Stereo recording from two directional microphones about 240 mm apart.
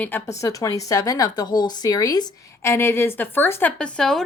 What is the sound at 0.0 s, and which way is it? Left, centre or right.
A woman's voice, centre.